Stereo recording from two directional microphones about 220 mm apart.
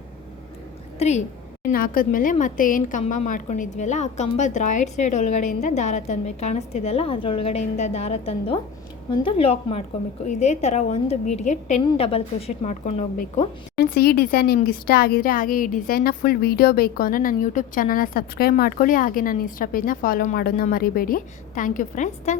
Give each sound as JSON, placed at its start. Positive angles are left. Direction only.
{"t": 0.9, "sound": "a woman's voice", "side_deg": 30}
{"t": 1.7, "sound": "a woman's voice", "side_deg": 40}
{"t": 13.7, "sound": "a woman's voice", "side_deg": 45}